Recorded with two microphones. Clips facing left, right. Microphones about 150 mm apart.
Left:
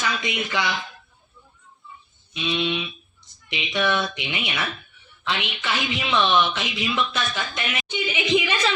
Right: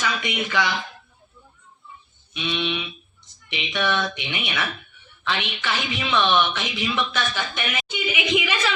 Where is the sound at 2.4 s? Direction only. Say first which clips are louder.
Left 2 dB; 15° left (ahead or behind).